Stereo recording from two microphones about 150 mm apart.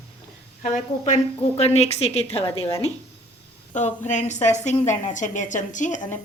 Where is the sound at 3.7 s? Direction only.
55° left (ahead or behind).